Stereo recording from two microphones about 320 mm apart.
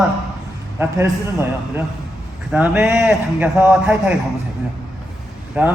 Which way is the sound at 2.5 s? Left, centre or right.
Centre.